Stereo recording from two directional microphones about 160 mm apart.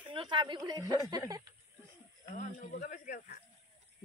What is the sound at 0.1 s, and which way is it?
Speech, 30° right (ahead or behind).